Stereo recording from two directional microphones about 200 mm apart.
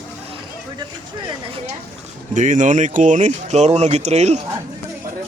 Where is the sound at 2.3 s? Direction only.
40° right (ahead or behind).